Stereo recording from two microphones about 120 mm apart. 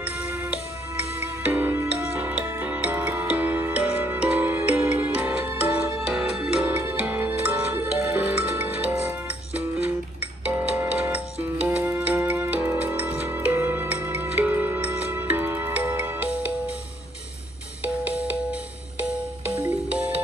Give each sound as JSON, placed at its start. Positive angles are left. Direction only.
{"t": 1.4, "sound": "music", "side_deg": -20}
{"t": 5.9, "sound": "music", "side_deg": -5}
{"t": 10.4, "sound": "music", "side_deg": -15}
{"t": 17.8, "sound": "music", "side_deg": -10}